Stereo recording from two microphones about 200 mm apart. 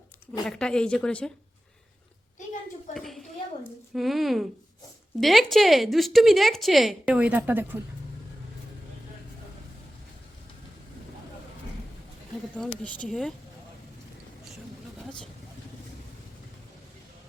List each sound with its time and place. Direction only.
0.4 s a woman's voice: 5° left (ahead or behind)
2.9 s a sound: centre (ahead or behind)
3.9 s a woman's voice: centre (ahead or behind)
12.5 s a woman's voice: 5° left (ahead or behind)